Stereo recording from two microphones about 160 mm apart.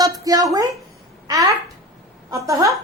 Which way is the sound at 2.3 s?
20° right (ahead or behind).